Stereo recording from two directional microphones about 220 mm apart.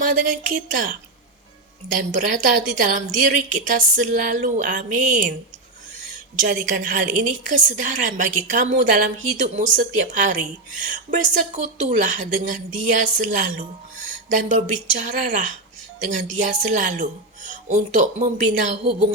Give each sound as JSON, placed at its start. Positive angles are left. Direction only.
{"t": 0.0, "sound": "a woman's voice", "side_deg": -40}
{"t": 6.5, "sound": "a woman's voice", "side_deg": -40}